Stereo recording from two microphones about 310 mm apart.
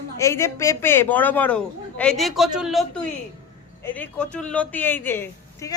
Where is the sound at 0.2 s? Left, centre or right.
Centre.